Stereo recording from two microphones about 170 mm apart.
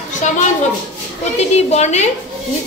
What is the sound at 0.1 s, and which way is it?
Speech, 45° left (ahead or behind).